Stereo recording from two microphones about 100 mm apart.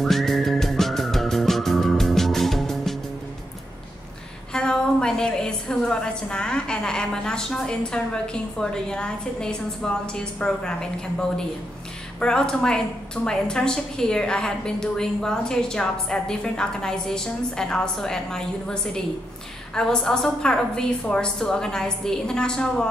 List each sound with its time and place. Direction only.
0.0 s music: centre (ahead or behind)
4.5 s a woman's voice: 10° left (ahead or behind)